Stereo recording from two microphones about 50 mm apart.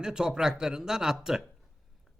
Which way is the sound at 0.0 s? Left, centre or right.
Centre.